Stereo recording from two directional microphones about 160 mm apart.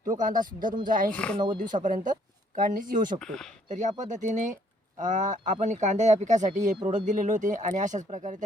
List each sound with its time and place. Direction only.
0.1 s speech: 55° right (ahead or behind)
1.1 s speech: 5° left (ahead or behind)
1.5 s speech: 55° right (ahead or behind)
3.2 s speech: 5° left (ahead or behind)
3.7 s speech: 50° right (ahead or behind)